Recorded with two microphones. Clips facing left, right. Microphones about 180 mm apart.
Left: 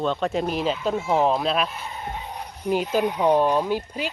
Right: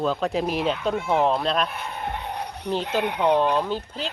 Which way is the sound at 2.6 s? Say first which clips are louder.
Left 3 dB; 10° left (ahead or behind).